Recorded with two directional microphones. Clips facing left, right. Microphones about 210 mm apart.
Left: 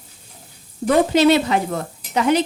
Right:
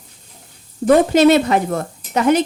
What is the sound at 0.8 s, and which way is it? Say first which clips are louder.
Speech: right 3 dB; 50° right (ahead or behind).